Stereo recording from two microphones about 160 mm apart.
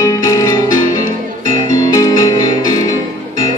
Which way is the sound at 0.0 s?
20° left (ahead or behind).